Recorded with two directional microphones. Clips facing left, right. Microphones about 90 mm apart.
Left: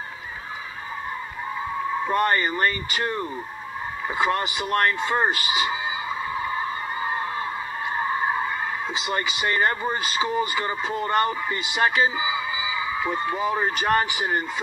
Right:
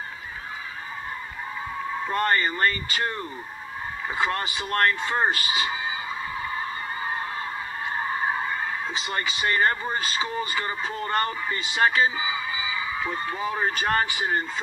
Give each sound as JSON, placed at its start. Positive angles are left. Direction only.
{"t": 2.0, "sound": "speech", "side_deg": 20}
{"t": 9.0, "sound": "speech", "side_deg": 20}